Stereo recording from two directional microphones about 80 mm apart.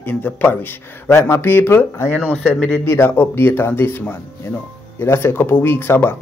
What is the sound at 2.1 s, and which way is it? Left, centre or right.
Speech, centre.